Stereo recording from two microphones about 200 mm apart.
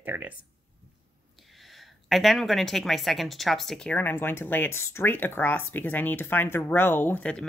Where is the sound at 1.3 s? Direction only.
Centre (ahead or behind).